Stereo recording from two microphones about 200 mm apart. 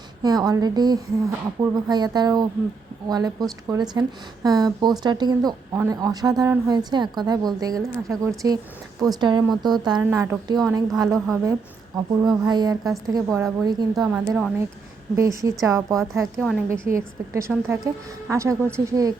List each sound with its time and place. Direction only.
0.2 s speech: 20° right (ahead or behind)
9.6 s a woman's voice: 20° right (ahead or behind)
12.5 s a woman's voice: 20° right (ahead or behind)
14.1 s a woman's voice: 5° right (ahead or behind)
16.4 s a woman's voice: centre (ahead or behind)
16.6 s a woman's voice: 15° right (ahead or behind)